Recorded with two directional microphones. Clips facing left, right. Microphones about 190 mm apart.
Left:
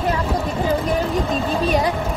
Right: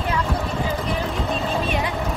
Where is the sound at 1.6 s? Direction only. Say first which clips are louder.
Left 6 dB; 35° left (ahead or behind).